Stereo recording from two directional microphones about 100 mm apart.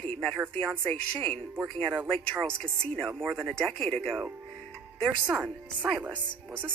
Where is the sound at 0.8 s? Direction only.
10° left (ahead or behind).